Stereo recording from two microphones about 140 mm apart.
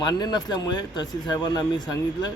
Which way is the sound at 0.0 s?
30° left (ahead or behind).